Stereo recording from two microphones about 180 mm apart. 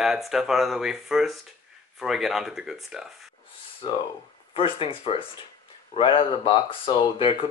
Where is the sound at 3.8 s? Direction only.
25° left (ahead or behind).